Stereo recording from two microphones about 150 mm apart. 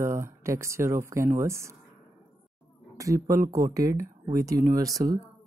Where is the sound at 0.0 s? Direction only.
20° right (ahead or behind).